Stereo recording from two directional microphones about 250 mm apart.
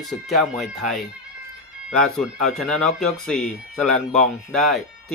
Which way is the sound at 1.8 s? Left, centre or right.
Centre.